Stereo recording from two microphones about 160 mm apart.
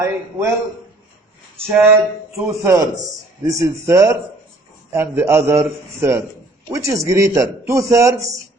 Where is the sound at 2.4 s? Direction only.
20° right (ahead or behind).